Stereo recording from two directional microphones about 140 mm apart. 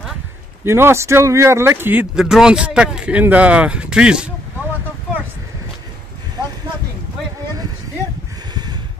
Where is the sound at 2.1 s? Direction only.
5° right (ahead or behind).